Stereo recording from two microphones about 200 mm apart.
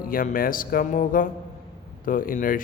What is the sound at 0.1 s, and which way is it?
A man's voice, 45° left (ahead or behind).